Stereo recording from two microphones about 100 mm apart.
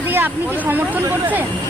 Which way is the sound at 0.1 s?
20° right (ahead or behind).